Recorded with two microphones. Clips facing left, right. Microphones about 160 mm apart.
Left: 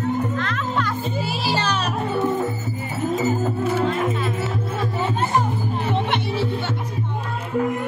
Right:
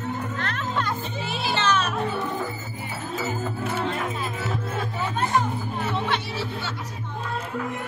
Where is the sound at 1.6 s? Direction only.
35° left (ahead or behind).